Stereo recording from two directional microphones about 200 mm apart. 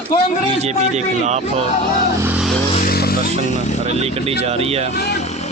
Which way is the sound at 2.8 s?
50° left (ahead or behind).